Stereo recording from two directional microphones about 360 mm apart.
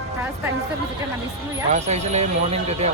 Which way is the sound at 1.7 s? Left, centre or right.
Centre.